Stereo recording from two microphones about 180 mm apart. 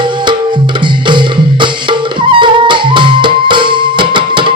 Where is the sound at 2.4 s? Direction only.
25° right (ahead or behind).